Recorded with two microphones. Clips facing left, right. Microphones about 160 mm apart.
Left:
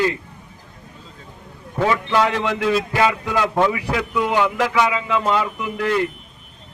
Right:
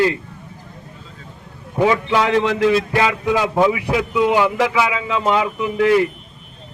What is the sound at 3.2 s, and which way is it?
A man's voice, 15° right (ahead or behind).